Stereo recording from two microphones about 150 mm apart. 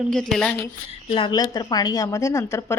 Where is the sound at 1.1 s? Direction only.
35° left (ahead or behind).